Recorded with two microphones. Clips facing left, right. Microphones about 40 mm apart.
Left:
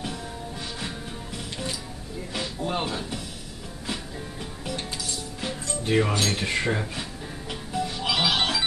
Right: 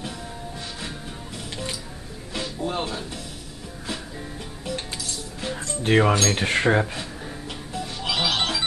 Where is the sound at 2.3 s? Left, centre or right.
Centre.